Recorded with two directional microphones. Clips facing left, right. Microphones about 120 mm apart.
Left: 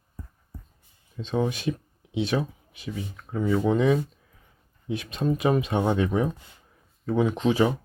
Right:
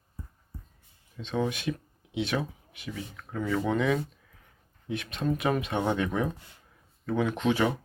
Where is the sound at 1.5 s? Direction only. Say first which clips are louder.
Left 3 dB; 35° left (ahead or behind).